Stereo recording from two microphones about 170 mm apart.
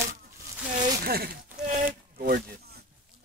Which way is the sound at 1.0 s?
65° right (ahead or behind).